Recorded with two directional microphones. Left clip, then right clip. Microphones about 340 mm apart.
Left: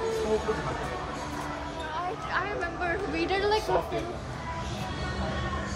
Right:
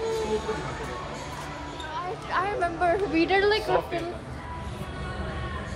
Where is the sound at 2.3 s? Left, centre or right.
Centre.